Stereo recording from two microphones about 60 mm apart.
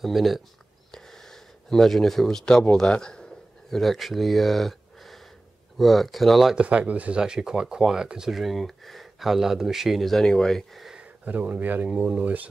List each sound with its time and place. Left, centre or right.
0.0 s speech: centre
0.9 s a sound: centre
2.7 s a man's voice: centre
3.7 s speech: centre
6.5 s speech: centre
11.0 s speech: right